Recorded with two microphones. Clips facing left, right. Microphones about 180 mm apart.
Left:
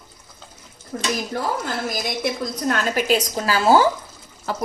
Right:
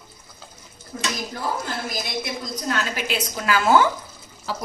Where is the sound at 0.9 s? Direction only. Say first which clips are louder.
Left 2 dB; 65° left (ahead or behind).